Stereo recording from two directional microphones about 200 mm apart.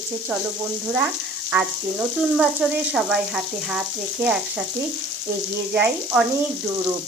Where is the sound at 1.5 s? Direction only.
5° right (ahead or behind).